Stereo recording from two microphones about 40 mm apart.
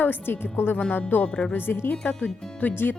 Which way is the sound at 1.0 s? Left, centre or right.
Left.